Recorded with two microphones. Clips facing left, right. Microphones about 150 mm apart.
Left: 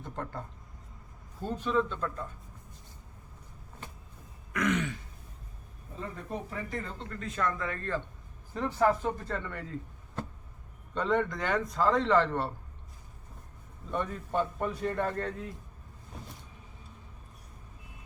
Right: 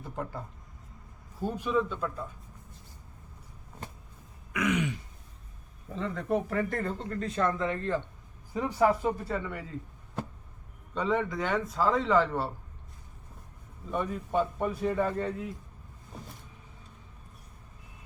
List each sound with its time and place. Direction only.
0.0 s a man's voice: 5° right (ahead or behind)
4.5 s a man's voice: 10° right (ahead or behind)
6.0 s speech: 80° right; by 7.2 s 50° right (ahead or behind)
7.2 s a man's voice: 30° right (ahead or behind); by 9.8 s 5° right (ahead or behind)
10.9 s a man's voice: 5° right (ahead or behind)
13.9 s a man's voice: 5° right (ahead or behind)